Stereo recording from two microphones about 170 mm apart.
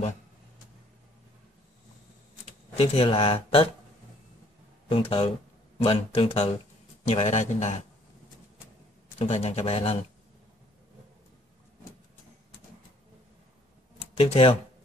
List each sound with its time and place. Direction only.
2.8 s speech: 35° left (ahead or behind)
4.8 s speech: 30° left (ahead or behind)
9.2 s speech: 35° left (ahead or behind)
14.1 s speech: 35° left (ahead or behind)